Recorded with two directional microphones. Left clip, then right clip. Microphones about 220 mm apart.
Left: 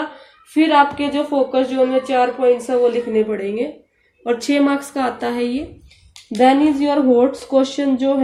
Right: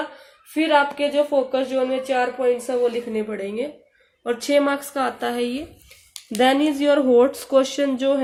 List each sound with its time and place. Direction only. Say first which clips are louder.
0.5 s speech: left 5 dB; 25° right (ahead or behind)